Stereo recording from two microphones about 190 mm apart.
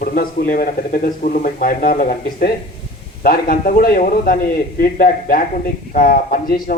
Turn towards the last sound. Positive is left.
turn(degrees=50)  # may be behind; listen again after turning